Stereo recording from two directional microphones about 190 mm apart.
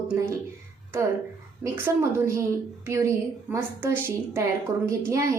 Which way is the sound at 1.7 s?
15° right (ahead or behind).